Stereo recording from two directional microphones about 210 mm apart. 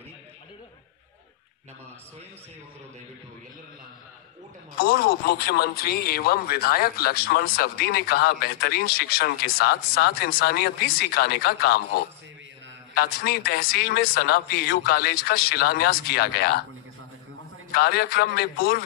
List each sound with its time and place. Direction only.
4.7 s speech: 45° left (ahead or behind)
12.9 s speech: 50° left (ahead or behind)
17.7 s speech: 50° left (ahead or behind)